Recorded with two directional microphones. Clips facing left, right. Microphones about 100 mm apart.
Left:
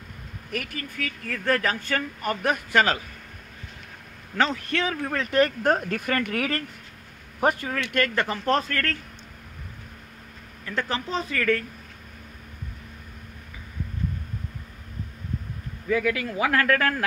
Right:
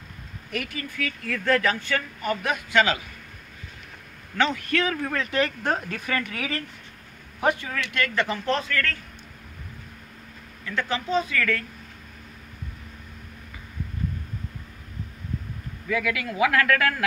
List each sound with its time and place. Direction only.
0.5 s speech: 45° left (ahead or behind)
4.4 s a man's voice: 35° left (ahead or behind)
5.3 s speech: 45° left (ahead or behind)
10.6 s a man's voice: 35° left (ahead or behind)
15.9 s a man's voice: 35° left (ahead or behind)